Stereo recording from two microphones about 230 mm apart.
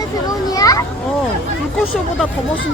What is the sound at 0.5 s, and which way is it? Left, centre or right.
Children playing, centre.